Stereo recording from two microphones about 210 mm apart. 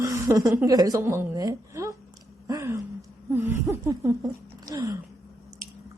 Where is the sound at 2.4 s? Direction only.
15° right (ahead or behind).